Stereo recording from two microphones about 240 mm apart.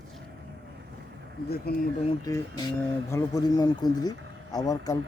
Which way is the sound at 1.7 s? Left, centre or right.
Left.